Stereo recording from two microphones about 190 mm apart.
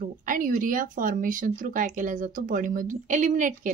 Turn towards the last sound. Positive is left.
turn(degrees=-45)  # may be behind; listen again after turning